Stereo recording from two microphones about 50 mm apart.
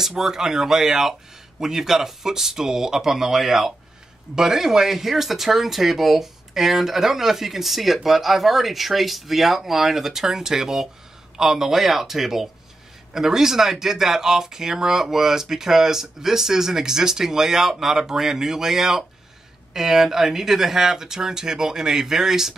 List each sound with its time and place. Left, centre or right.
0.0 s speech: centre